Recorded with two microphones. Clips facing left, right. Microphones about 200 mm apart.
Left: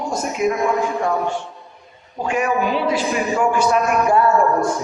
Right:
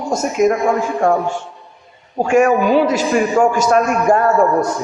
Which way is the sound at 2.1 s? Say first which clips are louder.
Right 7 dB; 45° right (ahead or behind).